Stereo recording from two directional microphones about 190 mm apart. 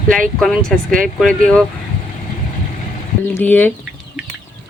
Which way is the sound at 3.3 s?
10° left (ahead or behind).